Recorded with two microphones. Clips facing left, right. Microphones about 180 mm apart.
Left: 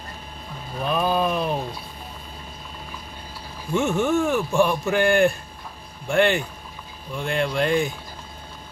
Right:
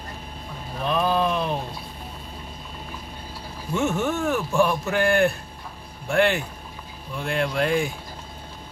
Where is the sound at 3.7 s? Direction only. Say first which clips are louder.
Left 3 dB; 5° right (ahead or behind).